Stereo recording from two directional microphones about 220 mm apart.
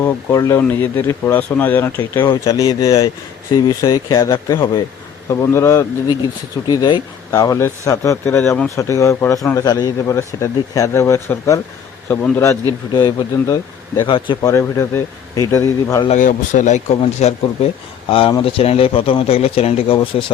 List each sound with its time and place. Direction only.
0.0 s speech: 15° left (ahead or behind)
16.0 s speech: 35° left (ahead or behind)